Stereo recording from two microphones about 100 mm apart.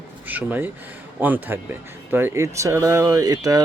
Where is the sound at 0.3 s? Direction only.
15° right (ahead or behind).